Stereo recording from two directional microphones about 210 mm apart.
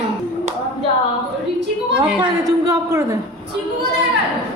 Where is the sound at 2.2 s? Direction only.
15° right (ahead or behind).